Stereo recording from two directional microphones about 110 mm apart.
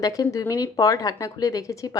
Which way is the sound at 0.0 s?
35° left (ahead or behind).